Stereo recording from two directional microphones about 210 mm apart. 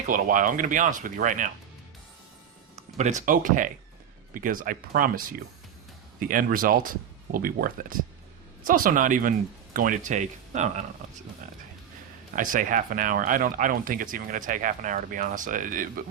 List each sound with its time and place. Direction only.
0.1 s speech: 40° right (ahead or behind)
2.7 s speech: 35° right (ahead or behind)
12.4 s speech: 40° right (ahead or behind)